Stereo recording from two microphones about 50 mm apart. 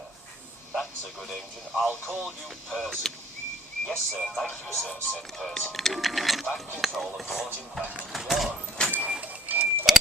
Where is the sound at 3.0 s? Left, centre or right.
Centre.